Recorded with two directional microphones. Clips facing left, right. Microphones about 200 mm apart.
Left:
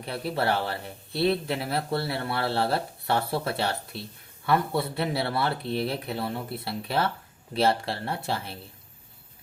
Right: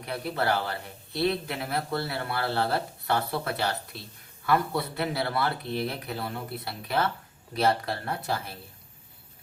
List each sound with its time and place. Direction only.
0.0 s speech: 30° left (ahead or behind)